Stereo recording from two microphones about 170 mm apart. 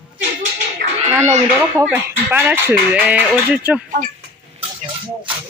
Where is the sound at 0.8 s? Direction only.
65° right (ahead or behind).